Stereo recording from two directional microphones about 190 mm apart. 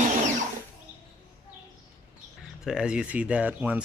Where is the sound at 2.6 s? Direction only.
5° right (ahead or behind).